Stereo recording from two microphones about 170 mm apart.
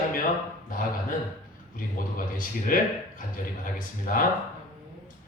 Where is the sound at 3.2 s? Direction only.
55° left (ahead or behind).